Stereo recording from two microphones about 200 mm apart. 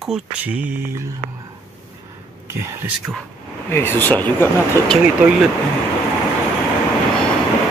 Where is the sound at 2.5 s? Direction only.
15° right (ahead or behind).